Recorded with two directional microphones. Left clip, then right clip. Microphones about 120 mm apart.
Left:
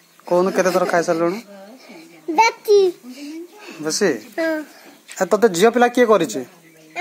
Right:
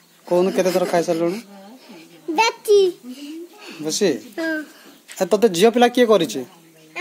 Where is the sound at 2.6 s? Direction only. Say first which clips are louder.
Left 1 dB; 50° right (ahead or behind).